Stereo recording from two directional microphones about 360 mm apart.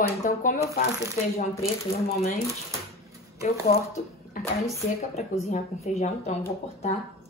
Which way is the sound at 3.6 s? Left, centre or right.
Centre.